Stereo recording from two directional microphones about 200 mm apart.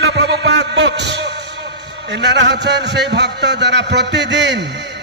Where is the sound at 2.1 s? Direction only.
60° right (ahead or behind).